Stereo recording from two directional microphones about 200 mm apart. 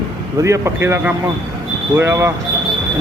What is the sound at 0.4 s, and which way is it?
A man's voice, 15° right (ahead or behind).